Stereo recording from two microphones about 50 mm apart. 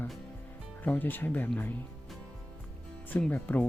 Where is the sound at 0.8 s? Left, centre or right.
Left.